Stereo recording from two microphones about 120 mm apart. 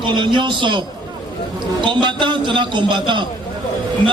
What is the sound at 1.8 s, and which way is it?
A man's voice, 40° right (ahead or behind).